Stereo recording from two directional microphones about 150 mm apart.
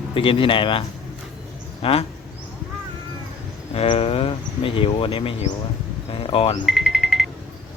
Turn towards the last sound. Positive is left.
turn(degrees=0)  # may be behind; listen again after turning